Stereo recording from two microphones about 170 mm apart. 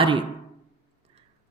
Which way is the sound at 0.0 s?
30° right (ahead or behind).